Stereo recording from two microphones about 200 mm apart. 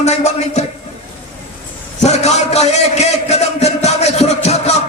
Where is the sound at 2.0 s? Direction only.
35° left (ahead or behind).